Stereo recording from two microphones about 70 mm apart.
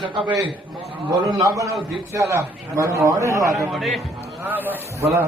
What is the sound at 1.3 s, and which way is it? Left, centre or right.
A man's voice, right.